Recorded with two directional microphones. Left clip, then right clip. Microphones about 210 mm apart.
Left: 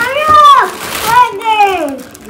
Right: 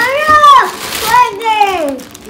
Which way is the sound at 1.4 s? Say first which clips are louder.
Left 1 dB; 45° right (ahead or behind).